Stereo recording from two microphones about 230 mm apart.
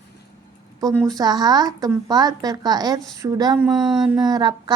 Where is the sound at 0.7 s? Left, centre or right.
Centre.